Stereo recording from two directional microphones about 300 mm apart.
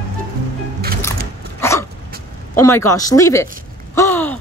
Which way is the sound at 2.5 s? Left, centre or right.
Centre.